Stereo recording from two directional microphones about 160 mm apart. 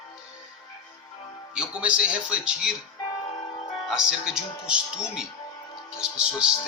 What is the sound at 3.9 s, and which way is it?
Speech, 5° right (ahead or behind).